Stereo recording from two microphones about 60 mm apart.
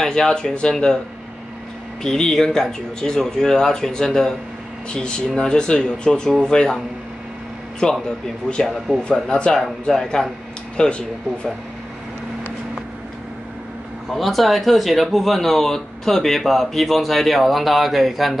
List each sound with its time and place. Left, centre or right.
0.0 s speech: centre
2.0 s speech: centre
7.8 s speech: centre
14.1 s speech: centre